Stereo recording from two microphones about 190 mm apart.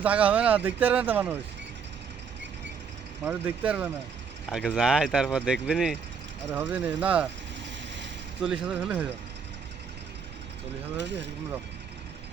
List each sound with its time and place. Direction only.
0.0 s speech: 5° right (ahead or behind)
3.2 s speech: 10° right (ahead or behind)
8.6 s speech: 5° right (ahead or behind)
10.9 s speech: 70° right (ahead or behind)